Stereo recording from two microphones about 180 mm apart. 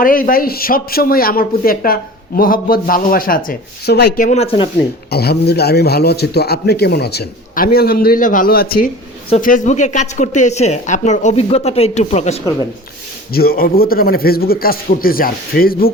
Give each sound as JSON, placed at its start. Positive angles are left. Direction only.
{"t": 0.0, "sound": "speech", "side_deg": 50}
{"t": 4.3, "sound": "speech", "side_deg": 35}
{"t": 5.1, "sound": "a man's voice", "side_deg": 60}
{"t": 13.3, "sound": "a man's voice", "side_deg": 55}